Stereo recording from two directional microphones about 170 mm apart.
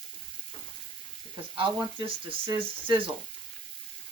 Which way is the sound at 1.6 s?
30° right (ahead or behind).